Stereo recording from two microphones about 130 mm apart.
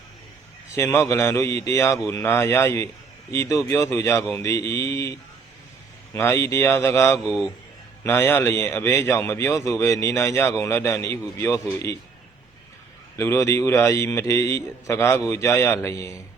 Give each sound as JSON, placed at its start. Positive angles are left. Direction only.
{"t": 0.8, "sound": "a man's voice", "side_deg": 20}
{"t": 6.1, "sound": "a man's voice", "side_deg": 20}
{"t": 7.3, "sound": "a man's voice", "side_deg": -5}
{"t": 8.0, "sound": "a man's voice", "side_deg": 15}
{"t": 13.1, "sound": "a man's voice", "side_deg": 20}